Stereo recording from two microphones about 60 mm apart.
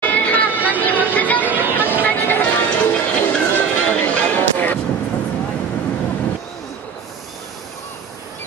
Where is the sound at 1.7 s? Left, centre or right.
Left.